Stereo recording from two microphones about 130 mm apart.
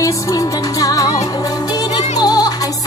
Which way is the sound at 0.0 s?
25° left (ahead or behind).